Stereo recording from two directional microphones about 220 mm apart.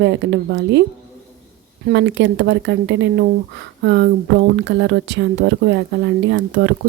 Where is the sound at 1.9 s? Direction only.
50° right (ahead or behind).